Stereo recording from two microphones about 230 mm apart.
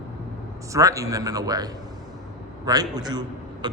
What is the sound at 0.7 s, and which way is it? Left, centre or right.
Speech, centre.